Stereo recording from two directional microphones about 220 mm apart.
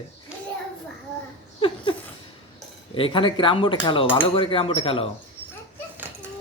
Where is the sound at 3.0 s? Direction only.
25° left (ahead or behind).